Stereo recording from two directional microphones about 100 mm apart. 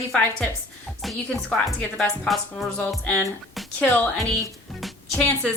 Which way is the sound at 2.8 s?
10° left (ahead or behind).